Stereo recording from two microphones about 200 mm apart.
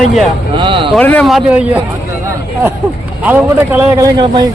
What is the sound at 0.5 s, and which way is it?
Speech, 25° right (ahead or behind).